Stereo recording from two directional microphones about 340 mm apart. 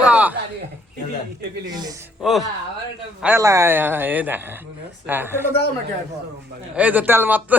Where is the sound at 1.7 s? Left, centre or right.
Centre.